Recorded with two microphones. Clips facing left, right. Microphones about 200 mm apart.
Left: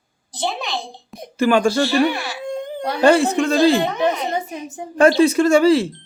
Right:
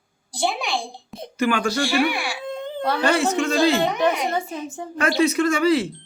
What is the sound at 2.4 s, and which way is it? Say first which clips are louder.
Babbling: left 2 dB; 15° left (ahead or behind).